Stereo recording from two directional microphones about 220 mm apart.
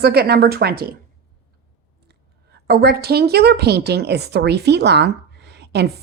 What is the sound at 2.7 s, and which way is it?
Speech, 45° right (ahead or behind).